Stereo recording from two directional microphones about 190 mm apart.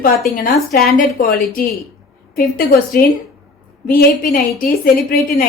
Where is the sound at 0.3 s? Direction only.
50° left (ahead or behind).